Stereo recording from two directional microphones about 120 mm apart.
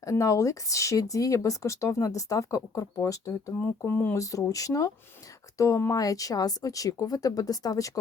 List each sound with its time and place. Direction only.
0.0 s speech: 25° left (ahead or behind)